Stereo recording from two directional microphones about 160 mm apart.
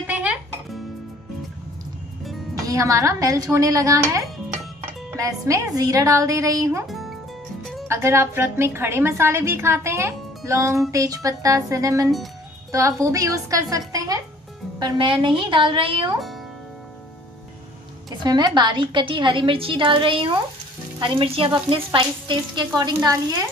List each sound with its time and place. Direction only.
0.0 s music: 10° right (ahead or behind)
2.5 s a woman's voice: 20° right (ahead or behind)
6.9 s music: centre (ahead or behind)
7.9 s a woman's voice: 15° right (ahead or behind); by 16.1 s 30° right (ahead or behind)
18.2 s speech: 25° right (ahead or behind)